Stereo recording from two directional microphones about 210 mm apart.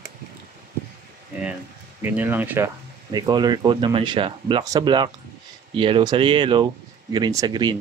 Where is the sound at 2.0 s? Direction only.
10° right (ahead or behind).